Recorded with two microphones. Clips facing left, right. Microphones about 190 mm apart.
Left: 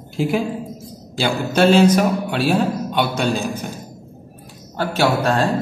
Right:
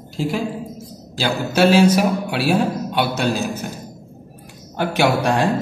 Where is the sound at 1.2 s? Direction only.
10° right (ahead or behind).